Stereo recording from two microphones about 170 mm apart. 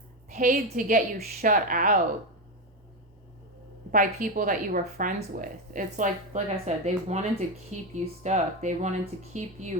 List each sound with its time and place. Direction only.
0.3 s a woman's voice: 55° right (ahead or behind)
3.9 s speech: 55° right (ahead or behind)